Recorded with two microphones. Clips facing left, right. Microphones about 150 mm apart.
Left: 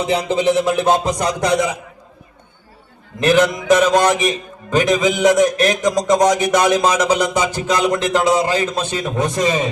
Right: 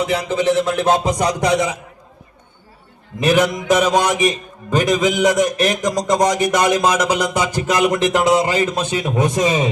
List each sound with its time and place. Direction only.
0.0 s a sound: 25° left (ahead or behind); by 0.9 s 5° left (ahead or behind)
1.0 s a man's voice: centre (ahead or behind)
3.2 s a man's voice: 5° right (ahead or behind)